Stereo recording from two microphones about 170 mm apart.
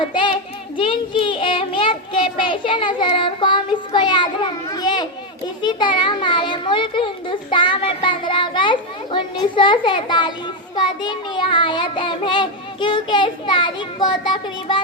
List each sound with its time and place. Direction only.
0.0 s a child's voice: 30° left (ahead or behind)